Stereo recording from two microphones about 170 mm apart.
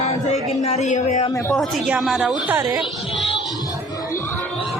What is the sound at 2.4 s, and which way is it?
Speech, 15° right (ahead or behind).